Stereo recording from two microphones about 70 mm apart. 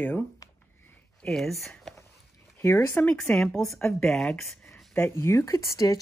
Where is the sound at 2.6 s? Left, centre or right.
Left.